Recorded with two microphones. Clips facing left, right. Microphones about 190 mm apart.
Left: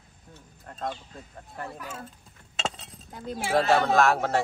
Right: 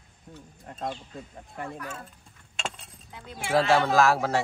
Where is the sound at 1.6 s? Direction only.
5° left (ahead or behind).